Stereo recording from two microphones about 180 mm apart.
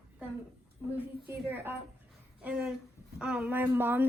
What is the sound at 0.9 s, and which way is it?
A woman's voice, 10° right (ahead or behind).